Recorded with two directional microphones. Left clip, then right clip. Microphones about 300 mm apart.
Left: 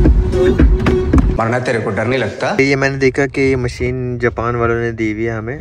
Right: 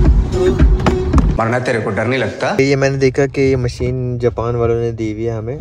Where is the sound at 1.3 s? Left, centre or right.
Centre.